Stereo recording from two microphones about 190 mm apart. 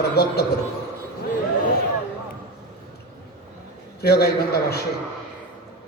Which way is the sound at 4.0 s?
55° left (ahead or behind).